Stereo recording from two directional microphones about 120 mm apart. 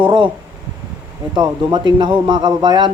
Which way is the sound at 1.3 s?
40° right (ahead or behind).